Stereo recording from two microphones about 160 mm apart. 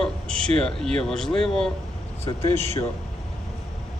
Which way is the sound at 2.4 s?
15° left (ahead or behind).